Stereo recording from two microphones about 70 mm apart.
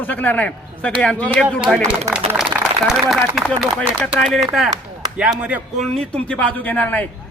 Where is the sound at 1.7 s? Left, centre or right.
Centre.